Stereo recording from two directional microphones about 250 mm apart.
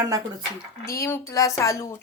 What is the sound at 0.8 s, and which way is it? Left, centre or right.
Speech, centre.